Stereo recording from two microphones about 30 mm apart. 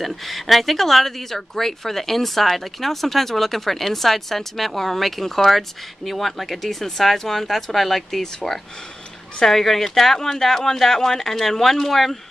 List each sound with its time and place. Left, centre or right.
0.0 s speech: centre
8.4 s speech: centre